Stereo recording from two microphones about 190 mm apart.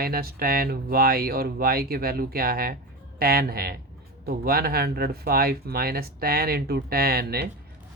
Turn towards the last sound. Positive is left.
turn(degrees=-55)  # may be behind; listen again after turning